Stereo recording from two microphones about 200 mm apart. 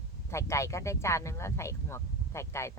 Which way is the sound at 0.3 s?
15° left (ahead or behind).